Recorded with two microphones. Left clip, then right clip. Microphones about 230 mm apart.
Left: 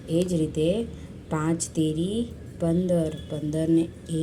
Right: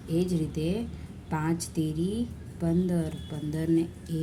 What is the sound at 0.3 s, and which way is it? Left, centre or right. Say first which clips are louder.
A woman's voice: left 7 dB; centre.